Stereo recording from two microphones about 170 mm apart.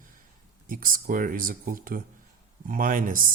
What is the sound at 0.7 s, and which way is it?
Speech, 55° right (ahead or behind).